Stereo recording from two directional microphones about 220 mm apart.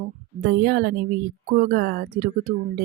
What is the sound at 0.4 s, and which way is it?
A woman's voice, 45° right (ahead or behind).